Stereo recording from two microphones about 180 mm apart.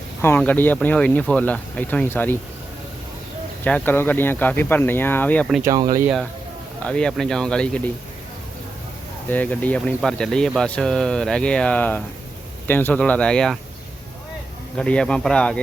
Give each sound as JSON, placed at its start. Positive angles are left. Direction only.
{"t": 0.2, "sound": "speech", "side_deg": 10}
{"t": 3.6, "sound": "speech", "side_deg": 10}
{"t": 5.6, "sound": "speech", "side_deg": -20}
{"t": 6.8, "sound": "speech", "side_deg": 5}
{"t": 9.3, "sound": "speech", "side_deg": 10}
{"t": 14.8, "sound": "speech", "side_deg": 5}